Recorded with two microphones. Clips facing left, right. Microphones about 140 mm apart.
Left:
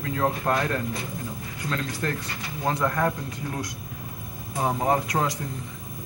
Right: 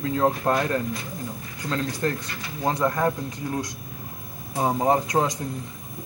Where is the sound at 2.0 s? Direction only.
25° right (ahead or behind).